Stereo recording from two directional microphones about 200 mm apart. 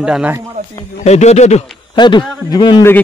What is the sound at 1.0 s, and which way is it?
Speech, 35° left (ahead or behind).